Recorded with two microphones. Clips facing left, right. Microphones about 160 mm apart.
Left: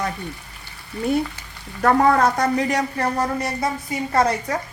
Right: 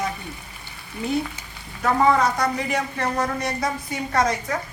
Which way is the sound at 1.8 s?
55° left (ahead or behind).